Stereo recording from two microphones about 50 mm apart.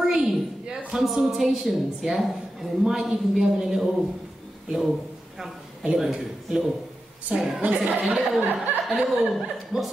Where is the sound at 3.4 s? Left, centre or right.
Centre.